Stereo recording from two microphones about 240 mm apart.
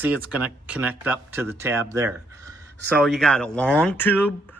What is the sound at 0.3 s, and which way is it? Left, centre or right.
Speech, centre.